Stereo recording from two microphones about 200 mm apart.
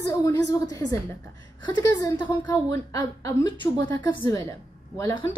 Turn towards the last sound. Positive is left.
turn(degrees=15)  # may be behind; listen again after turning